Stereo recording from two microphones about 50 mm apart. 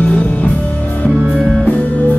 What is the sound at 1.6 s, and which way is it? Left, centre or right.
Music, left.